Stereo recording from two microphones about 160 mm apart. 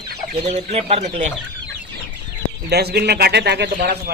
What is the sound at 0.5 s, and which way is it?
Speech, 45° right (ahead or behind).